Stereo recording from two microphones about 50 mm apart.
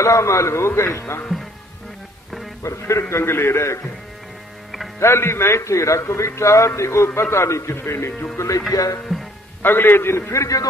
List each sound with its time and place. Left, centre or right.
0.0 s a man's voice: left
2.6 s speech: left
3.0 s a man's voice: left
5.0 s a man's voice: left
7.8 s a man's voice: left
8.4 s speech: left
9.1 s music: centre
9.6 s a man's voice: left